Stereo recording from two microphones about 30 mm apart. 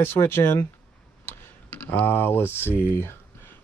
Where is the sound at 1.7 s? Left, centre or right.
Left.